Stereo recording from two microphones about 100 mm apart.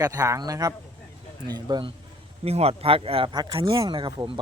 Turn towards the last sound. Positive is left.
turn(degrees=-50)  # may be behind; listen again after turning